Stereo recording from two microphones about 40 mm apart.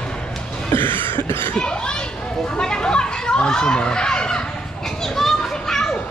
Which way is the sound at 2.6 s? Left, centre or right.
Centre.